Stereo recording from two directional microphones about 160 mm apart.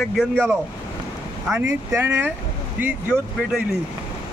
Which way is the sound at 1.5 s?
15° right (ahead or behind).